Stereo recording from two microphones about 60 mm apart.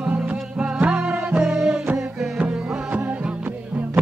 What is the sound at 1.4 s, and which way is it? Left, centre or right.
Music, centre.